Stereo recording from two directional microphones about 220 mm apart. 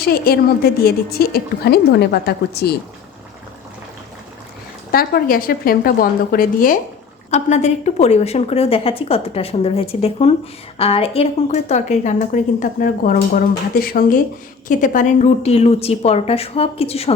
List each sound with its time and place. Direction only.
0.0 s a woman's voice: 45° left (ahead or behind)
4.9 s a woman's voice: 45° left (ahead or behind); by 17.2 s 25° left (ahead or behind)